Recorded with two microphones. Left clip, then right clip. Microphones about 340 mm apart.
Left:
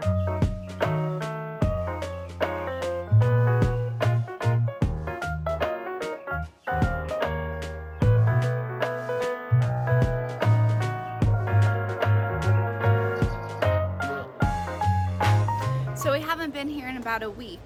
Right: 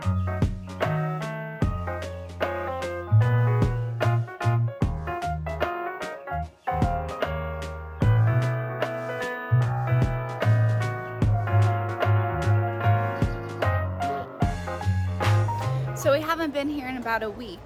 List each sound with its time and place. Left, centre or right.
0.0 s music: centre